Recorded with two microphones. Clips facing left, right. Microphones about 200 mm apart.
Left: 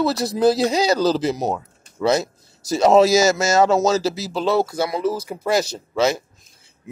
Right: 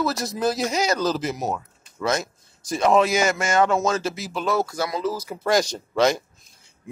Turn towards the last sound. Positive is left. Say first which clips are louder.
# even
turn(degrees=5)  # may be behind; listen again after turning